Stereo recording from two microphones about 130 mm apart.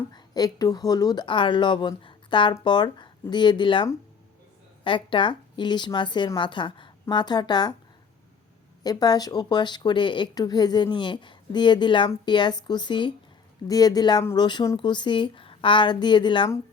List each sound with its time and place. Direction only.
0.1 s speech: 30° left (ahead or behind)
8.8 s speech: 30° left (ahead or behind)